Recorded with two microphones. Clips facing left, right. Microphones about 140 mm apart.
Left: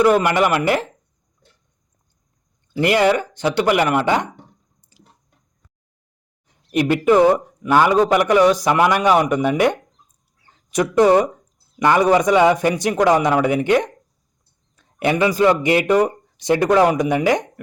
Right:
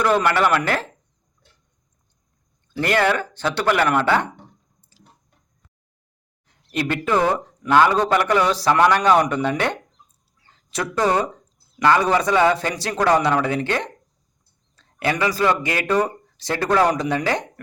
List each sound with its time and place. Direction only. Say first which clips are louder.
0.0 s speech: left 3 dB; 10° left (ahead or behind)
2.7 s speech: left 4 dB; 15° left (ahead or behind)
6.5 s speech: left 6 dB; 15° left (ahead or behind)